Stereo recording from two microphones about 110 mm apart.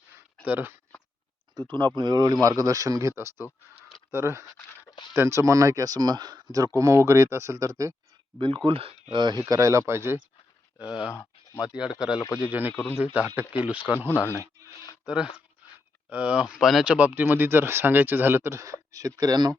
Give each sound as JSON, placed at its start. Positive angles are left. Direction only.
{"t": 0.4, "sound": "speech", "side_deg": -20}
{"t": 1.6, "sound": "speech", "side_deg": -40}
{"t": 8.4, "sound": "speech", "side_deg": -50}
{"t": 9.1, "sound": "speech", "side_deg": -40}
{"t": 9.5, "sound": "speech", "side_deg": -30}
{"t": 10.8, "sound": "speech", "side_deg": -10}
{"t": 11.1, "sound": "a sound", "side_deg": 25}
{"t": 11.6, "sound": "speech", "side_deg": -5}
{"t": 15.0, "sound": "speech", "side_deg": -5}
{"t": 15.6, "sound": "a sound", "side_deg": -15}
{"t": 16.0, "sound": "speech", "side_deg": -10}